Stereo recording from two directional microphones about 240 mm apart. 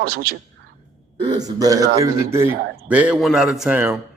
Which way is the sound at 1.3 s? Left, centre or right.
Centre.